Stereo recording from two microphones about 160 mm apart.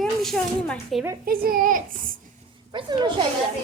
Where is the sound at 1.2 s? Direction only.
65° right (ahead or behind).